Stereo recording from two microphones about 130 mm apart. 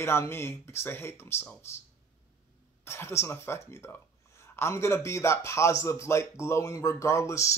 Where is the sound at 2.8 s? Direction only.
20° left (ahead or behind).